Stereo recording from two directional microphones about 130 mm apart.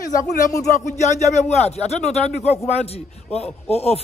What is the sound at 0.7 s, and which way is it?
Speech, 65° left (ahead or behind).